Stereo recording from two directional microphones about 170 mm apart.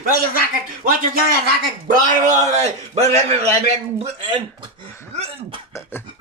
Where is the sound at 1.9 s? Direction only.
45° right (ahead or behind).